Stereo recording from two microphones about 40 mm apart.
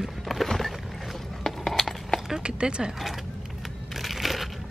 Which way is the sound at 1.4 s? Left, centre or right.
Centre.